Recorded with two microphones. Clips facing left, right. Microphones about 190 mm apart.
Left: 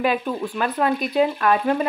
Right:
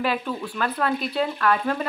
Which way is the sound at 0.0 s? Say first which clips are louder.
Left 4 dB; 15° left (ahead or behind).